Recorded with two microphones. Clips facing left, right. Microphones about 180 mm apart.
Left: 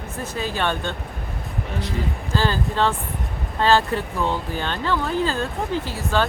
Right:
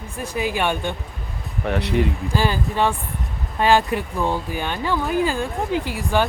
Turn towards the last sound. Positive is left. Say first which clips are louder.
# right 2 dB
turn(degrees=-15)  # may be behind; listen again after turning